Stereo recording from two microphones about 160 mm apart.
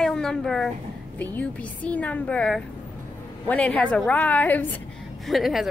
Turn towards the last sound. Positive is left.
turn(degrees=0)  # may be behind; listen again after turning